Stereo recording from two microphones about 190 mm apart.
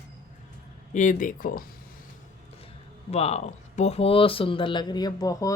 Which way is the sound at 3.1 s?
35° left (ahead or behind).